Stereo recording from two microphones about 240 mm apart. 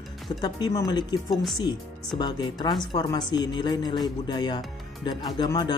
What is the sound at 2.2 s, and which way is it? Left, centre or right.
Speech, centre.